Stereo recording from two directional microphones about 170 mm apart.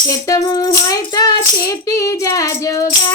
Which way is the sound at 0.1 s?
20° left (ahead or behind).